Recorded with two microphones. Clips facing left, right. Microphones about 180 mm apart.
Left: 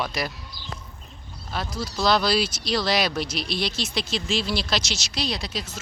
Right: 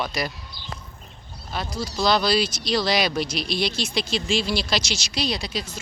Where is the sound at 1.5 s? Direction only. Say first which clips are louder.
Right 1 dB; centre (ahead or behind).